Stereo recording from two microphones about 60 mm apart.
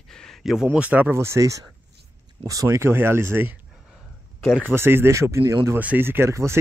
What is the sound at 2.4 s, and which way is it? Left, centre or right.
Speech, right.